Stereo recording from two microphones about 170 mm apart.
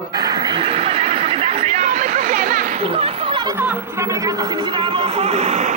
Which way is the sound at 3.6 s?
10° right (ahead or behind).